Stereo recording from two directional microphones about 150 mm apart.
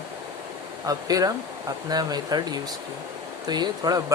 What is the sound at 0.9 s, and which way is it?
Speech, 25° right (ahead or behind).